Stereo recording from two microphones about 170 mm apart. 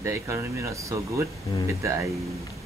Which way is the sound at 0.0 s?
15° right (ahead or behind).